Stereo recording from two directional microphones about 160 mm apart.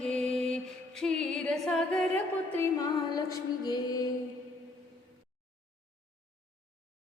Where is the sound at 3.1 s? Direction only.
25° left (ahead or behind).